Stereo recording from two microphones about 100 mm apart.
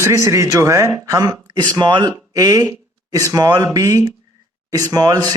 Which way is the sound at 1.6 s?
45° right (ahead or behind).